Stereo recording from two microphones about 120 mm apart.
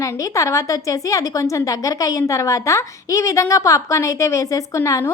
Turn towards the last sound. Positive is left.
turn(degrees=25)  # may be behind; listen again after turning